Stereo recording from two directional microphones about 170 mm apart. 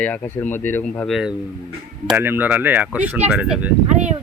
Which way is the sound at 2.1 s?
10° right (ahead or behind).